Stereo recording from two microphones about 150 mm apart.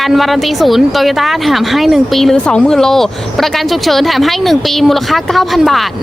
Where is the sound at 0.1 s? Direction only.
Centre (ahead or behind).